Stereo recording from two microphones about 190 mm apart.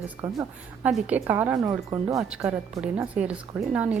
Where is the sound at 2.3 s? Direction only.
5° right (ahead or behind).